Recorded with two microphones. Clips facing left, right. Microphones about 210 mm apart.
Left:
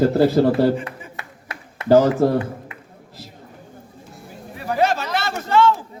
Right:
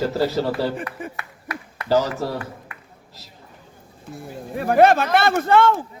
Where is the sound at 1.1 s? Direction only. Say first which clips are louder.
Right 3 dB; 25° left (ahead or behind).